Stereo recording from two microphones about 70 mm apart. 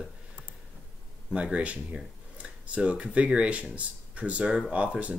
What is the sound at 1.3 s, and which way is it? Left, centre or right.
Speech, centre.